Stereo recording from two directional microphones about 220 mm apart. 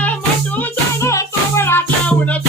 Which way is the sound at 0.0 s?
5° left (ahead or behind).